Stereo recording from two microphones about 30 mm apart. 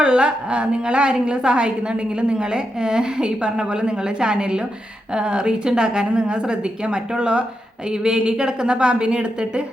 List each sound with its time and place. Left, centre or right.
0.0 s a woman's voice: right
7.9 s a woman's voice: right